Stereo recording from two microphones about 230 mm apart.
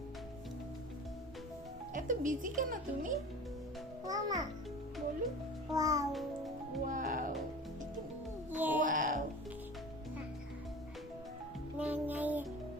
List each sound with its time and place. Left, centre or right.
1.9 s speech: right
4.0 s a child's voice: centre
5.7 s music: centre
6.8 s music: right
8.4 s music: centre
8.8 s music: right
11.8 s music: centre